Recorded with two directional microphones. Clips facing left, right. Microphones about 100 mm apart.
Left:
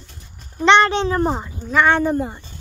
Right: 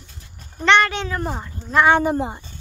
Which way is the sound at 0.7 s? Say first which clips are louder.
Left 3 dB; 25° left (ahead or behind).